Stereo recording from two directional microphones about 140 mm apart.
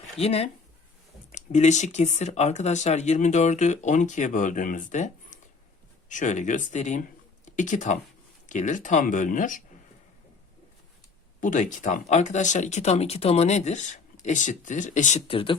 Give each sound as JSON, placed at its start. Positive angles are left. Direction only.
{"t": 0.2, "sound": "speech", "side_deg": 45}
{"t": 1.3, "sound": "speech", "side_deg": 60}
{"t": 11.3, "sound": "speech", "side_deg": 65}
{"t": 15.3, "sound": "speech", "side_deg": 40}